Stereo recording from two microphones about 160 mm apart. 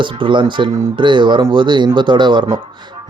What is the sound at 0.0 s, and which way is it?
Speech, 30° right (ahead or behind).